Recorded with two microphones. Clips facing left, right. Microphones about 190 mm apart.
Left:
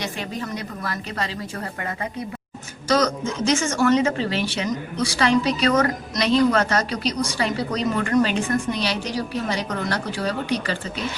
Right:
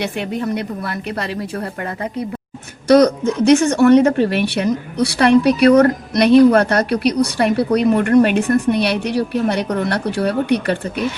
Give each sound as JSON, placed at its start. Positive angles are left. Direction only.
{"t": 0.0, "sound": "a woman's voice", "side_deg": -60}
{"t": 2.8, "sound": "a woman's voice", "side_deg": -60}